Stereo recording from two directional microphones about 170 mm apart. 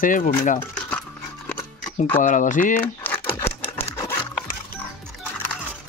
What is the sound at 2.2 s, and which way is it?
Speech, 50° left (ahead or behind).